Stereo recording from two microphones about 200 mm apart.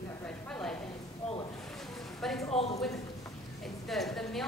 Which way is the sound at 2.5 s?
30° left (ahead or behind).